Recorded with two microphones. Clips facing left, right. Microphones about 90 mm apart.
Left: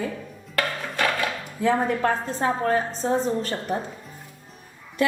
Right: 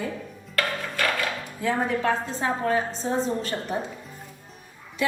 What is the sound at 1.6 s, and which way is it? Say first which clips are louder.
Speech: left 3 dB; 45° left (ahead or behind).